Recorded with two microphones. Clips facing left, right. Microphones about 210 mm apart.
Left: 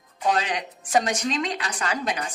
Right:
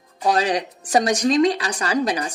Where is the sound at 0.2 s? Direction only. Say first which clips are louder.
Right 5 dB; 35° right (ahead or behind).